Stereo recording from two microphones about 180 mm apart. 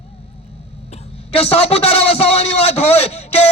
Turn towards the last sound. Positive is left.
turn(degrees=35)  # may be behind; listen again after turning